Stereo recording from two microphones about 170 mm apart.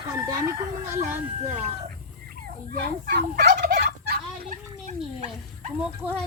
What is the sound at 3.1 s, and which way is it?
Fowl, 75° right (ahead or behind).